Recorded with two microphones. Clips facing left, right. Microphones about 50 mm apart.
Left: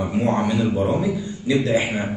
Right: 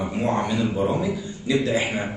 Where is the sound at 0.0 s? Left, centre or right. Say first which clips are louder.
Left 3 dB; centre.